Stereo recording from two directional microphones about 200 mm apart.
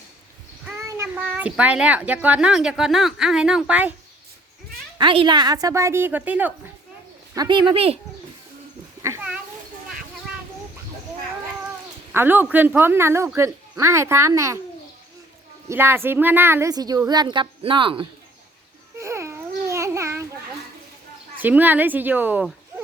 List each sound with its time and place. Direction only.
0.9 s a child's voice: 10° right (ahead or behind)
4.9 s speech: 25° right (ahead or behind); by 6.5 s 10° right (ahead or behind)
7.3 s speech: 25° right (ahead or behind)
9.0 s a sound: 15° right (ahead or behind)
12.1 s speech: 10° right (ahead or behind)
15.7 s speech: 10° right (ahead or behind)
18.9 s babbling: 15° right (ahead or behind)
21.4 s speech: 10° right (ahead or behind)